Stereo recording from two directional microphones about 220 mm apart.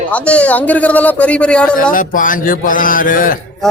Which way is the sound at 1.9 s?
35° left (ahead or behind).